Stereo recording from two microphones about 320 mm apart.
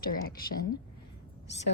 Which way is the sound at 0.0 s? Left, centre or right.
Left.